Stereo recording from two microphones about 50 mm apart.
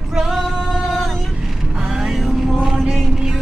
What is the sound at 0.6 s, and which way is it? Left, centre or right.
Music, centre.